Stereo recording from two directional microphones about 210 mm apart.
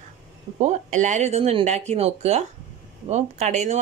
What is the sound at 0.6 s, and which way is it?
A man's voice, 35° right (ahead or behind).